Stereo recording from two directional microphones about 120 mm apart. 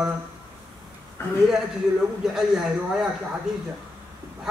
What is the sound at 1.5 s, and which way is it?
A man's voice, 5° right (ahead or behind).